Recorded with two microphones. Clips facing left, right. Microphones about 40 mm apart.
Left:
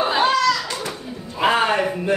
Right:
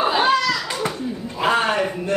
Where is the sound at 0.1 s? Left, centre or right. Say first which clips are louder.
Left 1 dB; centre.